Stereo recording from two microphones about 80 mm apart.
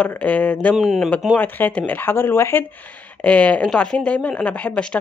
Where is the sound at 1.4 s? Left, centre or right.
Left.